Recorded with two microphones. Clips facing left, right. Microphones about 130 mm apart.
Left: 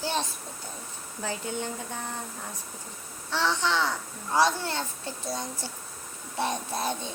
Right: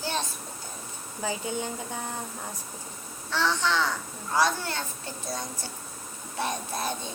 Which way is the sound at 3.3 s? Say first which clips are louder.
Even; 25° left (ahead or behind).